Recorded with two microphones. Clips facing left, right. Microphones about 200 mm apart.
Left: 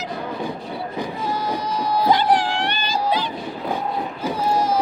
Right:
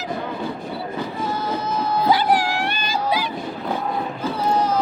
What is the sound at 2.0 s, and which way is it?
Music, 10° right (ahead or behind).